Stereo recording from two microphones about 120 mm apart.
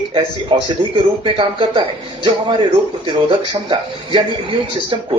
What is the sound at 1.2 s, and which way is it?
Speech, 45° right (ahead or behind).